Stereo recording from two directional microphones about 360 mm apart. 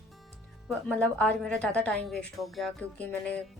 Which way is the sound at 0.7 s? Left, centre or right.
Centre.